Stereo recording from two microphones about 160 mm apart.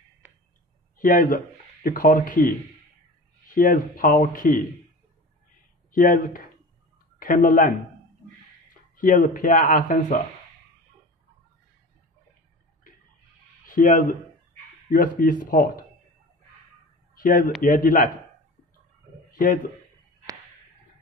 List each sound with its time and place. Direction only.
0.9 s speech: 60° left (ahead or behind)
5.9 s speech: 60° left (ahead or behind)
8.9 s speech: 55° left (ahead or behind)
13.7 s speech: 55° left (ahead or behind)
17.1 s a sound: 60° left (ahead or behind)
17.6 s speech: 60° left (ahead or behind)
19.3 s a man's voice: 60° left (ahead or behind)